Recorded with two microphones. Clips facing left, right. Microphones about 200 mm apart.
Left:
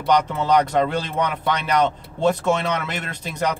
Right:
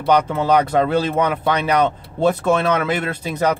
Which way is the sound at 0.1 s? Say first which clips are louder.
Right 2 dB; 5° right (ahead or behind).